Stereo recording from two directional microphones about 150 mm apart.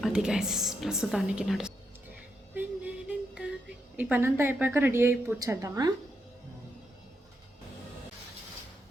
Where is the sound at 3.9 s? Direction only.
10° right (ahead or behind).